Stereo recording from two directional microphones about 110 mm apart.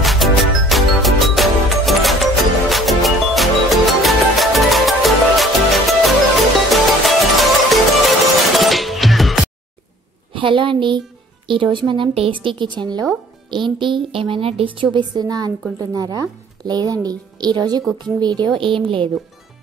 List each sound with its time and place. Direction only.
0.0 s music: centre (ahead or behind)
10.3 s a sound: 50° right (ahead or behind)
11.4 s a woman's voice: 50° right (ahead or behind)